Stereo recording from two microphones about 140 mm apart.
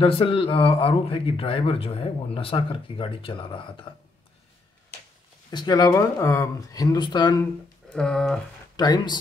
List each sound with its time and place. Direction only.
0.0 s speech: 40° left (ahead or behind)
5.5 s speech: 30° left (ahead or behind)
7.9 s speech: 5° left (ahead or behind)
8.7 s speech: 30° left (ahead or behind)